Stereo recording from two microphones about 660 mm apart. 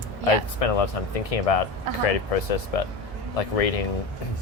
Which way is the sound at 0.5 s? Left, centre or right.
Left.